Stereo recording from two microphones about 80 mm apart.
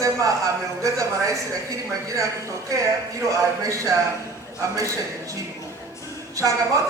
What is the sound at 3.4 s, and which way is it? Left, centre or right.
Speech, right.